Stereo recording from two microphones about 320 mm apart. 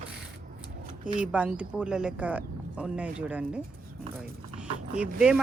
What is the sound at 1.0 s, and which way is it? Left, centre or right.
Speech, centre.